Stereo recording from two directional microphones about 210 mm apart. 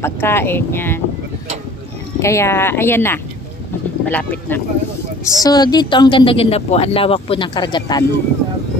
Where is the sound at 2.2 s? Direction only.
15° left (ahead or behind).